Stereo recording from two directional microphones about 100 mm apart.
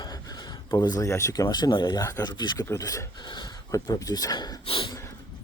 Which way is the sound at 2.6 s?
30° left (ahead or behind).